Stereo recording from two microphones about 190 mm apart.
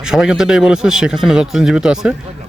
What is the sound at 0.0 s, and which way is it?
Speech, 5° right (ahead or behind).